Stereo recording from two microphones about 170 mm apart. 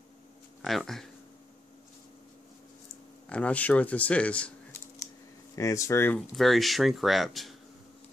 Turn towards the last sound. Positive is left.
turn(degrees=0)  # may be behind; listen again after turning